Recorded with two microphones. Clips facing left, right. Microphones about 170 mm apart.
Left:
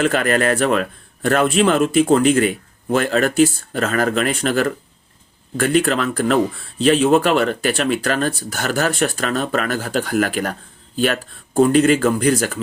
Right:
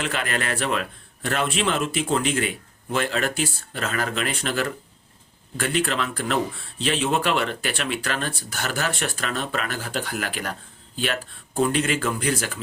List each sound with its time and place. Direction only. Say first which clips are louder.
0.0 s speech: left 10 dB; 50° left (ahead or behind)